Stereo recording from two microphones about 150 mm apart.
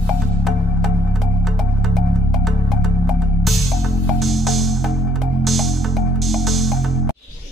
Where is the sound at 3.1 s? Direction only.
Centre (ahead or behind).